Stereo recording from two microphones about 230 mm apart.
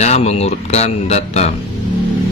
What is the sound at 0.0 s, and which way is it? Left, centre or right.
Speech, left.